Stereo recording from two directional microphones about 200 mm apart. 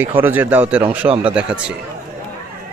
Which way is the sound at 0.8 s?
30° right (ahead or behind).